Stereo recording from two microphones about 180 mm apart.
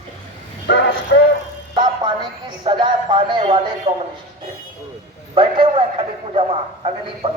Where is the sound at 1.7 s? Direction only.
25° right (ahead or behind).